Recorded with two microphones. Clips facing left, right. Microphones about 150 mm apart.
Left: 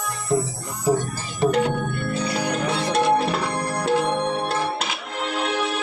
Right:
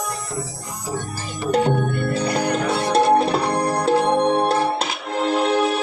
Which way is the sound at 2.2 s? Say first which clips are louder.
Right 3 dB; 55° right (ahead or behind).